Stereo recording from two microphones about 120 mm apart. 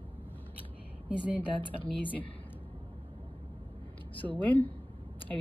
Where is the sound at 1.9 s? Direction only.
45° left (ahead or behind).